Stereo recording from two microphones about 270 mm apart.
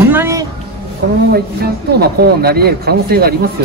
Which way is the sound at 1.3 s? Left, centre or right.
Right.